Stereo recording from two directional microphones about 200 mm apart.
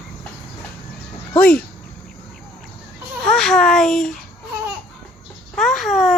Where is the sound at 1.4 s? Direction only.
45° left (ahead or behind).